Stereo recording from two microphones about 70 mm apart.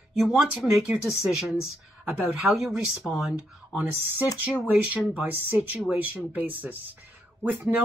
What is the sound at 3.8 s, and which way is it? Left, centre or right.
Speech, right.